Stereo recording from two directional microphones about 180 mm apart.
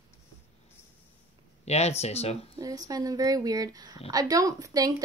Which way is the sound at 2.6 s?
20° right (ahead or behind).